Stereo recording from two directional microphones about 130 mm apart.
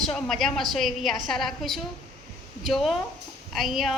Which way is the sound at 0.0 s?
Centre (ahead or behind).